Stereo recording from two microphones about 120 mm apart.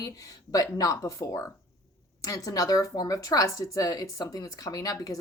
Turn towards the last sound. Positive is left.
turn(degrees=30)  # may be behind; listen again after turning